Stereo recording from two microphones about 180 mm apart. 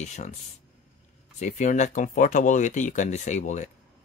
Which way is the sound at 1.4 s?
45° left (ahead or behind).